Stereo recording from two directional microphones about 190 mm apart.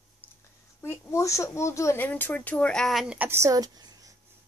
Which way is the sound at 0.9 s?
15° left (ahead or behind).